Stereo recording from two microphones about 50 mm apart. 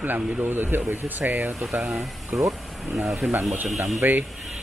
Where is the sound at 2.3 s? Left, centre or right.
Right.